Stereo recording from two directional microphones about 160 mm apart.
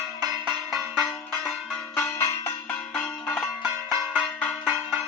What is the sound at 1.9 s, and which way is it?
Church bell, 20° left (ahead or behind).